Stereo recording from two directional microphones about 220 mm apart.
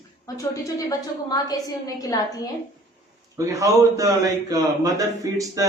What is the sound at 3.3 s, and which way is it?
A man's voice, 15° right (ahead or behind).